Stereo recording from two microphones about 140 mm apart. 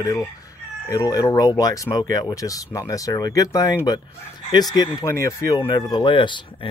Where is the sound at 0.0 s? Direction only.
25° left (ahead or behind).